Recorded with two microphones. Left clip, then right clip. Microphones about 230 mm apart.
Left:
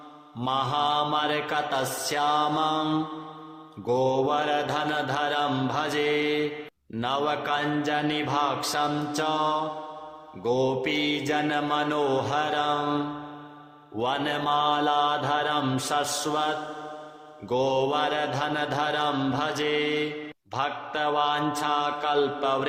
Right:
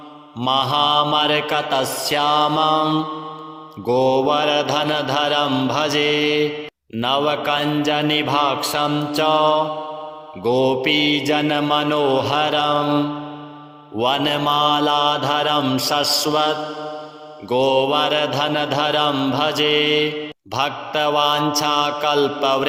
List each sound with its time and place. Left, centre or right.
0.4 s mantra: right